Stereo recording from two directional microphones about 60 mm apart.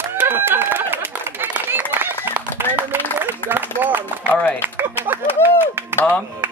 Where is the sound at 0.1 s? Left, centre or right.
Right.